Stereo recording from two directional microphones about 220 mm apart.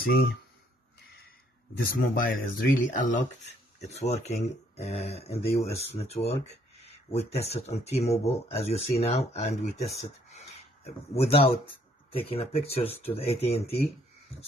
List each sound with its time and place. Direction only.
0.0 s speech: 45° left (ahead or behind)
2.0 s speech: 40° left (ahead or behind)